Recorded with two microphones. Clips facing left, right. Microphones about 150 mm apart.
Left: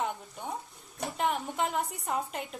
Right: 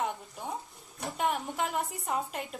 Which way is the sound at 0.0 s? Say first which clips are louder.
Even; centre (ahead or behind).